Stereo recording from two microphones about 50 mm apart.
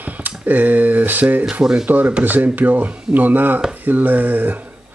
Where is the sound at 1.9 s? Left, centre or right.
Right.